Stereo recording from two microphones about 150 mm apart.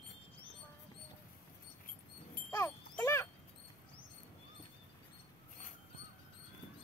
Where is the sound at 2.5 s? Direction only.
15° left (ahead or behind).